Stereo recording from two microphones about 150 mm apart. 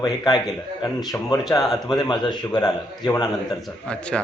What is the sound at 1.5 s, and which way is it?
A man's voice, 25° left (ahead or behind).